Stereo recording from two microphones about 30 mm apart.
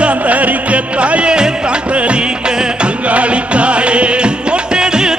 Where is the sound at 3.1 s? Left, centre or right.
Right.